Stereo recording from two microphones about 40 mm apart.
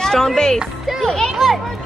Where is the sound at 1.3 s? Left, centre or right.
Centre.